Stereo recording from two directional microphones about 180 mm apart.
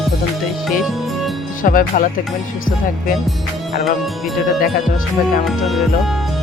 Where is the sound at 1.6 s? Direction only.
50° left (ahead or behind).